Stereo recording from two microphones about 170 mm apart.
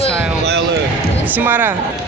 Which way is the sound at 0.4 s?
80° right.